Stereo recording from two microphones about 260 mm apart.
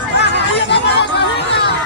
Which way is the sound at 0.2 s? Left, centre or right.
Left.